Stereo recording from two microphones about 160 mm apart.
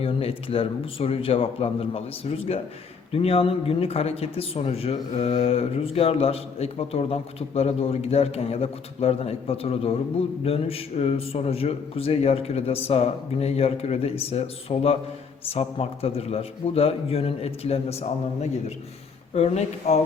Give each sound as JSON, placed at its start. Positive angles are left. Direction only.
{"t": 0.0, "sound": "speech", "side_deg": 35}
{"t": 19.3, "sound": "speech", "side_deg": 40}